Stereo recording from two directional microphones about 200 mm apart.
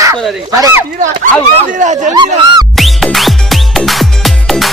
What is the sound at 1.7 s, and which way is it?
Speech, 40° right (ahead or behind).